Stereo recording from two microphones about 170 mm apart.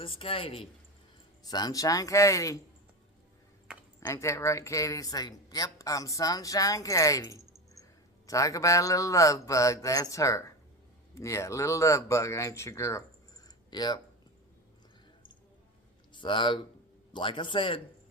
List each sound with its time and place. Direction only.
0.0 s speech: 30° left (ahead or behind)
1.5 s speech: 25° left (ahead or behind)
4.0 s speech: 15° left (ahead or behind)
16.1 s speech: 30° left (ahead or behind)